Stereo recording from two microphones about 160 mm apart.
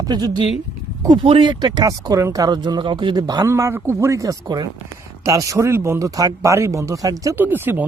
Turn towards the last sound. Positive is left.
turn(degrees=-10)  # may be behind; listen again after turning